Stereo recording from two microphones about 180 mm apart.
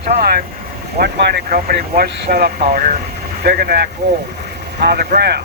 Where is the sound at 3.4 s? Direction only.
60° right (ahead or behind).